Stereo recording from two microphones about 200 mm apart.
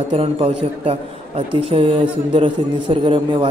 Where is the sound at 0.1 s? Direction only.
30° right (ahead or behind).